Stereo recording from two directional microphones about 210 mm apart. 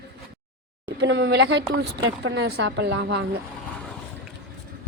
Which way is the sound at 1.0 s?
55° right (ahead or behind).